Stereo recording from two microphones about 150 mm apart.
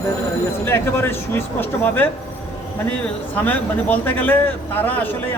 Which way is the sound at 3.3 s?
10° left (ahead or behind).